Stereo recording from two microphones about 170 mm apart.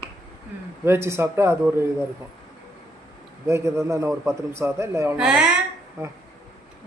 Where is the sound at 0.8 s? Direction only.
15° right (ahead or behind).